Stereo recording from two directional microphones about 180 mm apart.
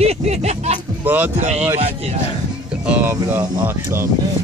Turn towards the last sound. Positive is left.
turn(degrees=-15)  # may be behind; listen again after turning